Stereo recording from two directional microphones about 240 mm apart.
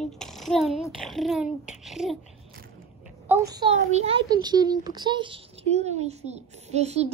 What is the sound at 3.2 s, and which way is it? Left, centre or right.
A child's voice, centre.